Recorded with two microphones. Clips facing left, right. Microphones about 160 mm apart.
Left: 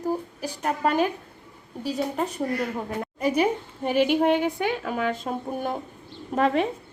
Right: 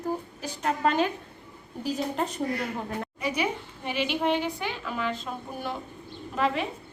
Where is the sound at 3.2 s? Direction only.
45° left (ahead or behind).